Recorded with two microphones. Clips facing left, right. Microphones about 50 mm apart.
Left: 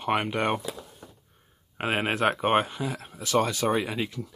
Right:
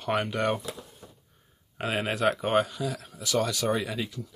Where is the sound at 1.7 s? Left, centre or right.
Left.